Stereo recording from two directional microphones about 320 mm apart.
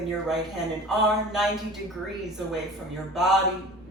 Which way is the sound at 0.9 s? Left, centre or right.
Centre.